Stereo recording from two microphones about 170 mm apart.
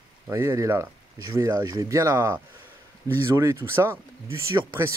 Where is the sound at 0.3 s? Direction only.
20° right (ahead or behind).